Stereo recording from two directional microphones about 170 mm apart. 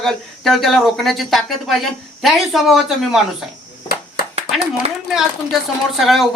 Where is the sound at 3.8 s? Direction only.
65° left (ahead or behind).